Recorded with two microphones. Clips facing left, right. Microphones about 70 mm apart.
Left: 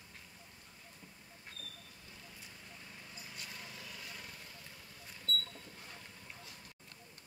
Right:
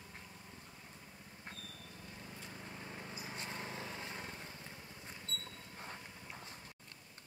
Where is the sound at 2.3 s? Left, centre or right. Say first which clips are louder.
Right 7 dB; right.